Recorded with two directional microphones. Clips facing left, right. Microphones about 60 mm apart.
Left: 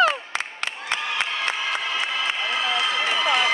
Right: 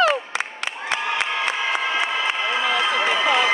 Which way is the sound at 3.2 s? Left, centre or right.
Right.